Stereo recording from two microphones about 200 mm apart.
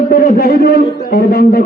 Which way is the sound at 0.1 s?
50° left (ahead or behind).